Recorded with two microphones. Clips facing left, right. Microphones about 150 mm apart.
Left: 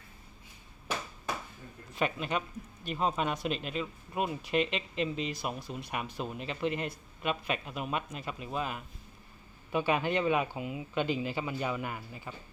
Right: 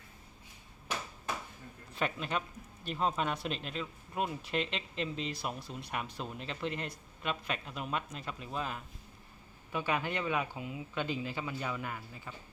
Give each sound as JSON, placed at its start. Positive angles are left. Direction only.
{"t": 2.0, "sound": "speech", "side_deg": 5}
{"t": 9.7, "sound": "speech", "side_deg": 20}